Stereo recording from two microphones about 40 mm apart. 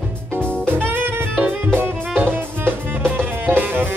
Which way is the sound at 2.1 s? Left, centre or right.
Right.